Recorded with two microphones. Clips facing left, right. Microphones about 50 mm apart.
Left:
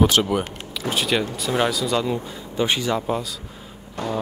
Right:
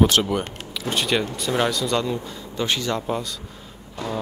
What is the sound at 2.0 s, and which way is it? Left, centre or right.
Speech, centre.